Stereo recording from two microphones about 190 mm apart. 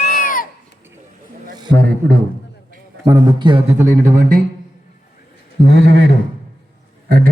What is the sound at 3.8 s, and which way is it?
Speech, 45° right (ahead or behind).